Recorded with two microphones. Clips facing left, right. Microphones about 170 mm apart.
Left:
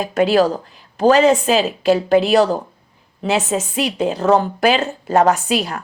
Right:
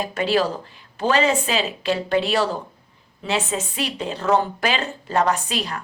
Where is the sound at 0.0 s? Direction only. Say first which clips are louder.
Left 6 dB; 45° left (ahead or behind).